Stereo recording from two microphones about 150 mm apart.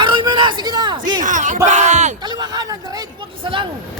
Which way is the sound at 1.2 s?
55° right (ahead or behind).